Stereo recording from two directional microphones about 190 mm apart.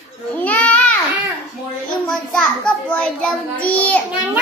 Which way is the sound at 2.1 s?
5° left (ahead or behind).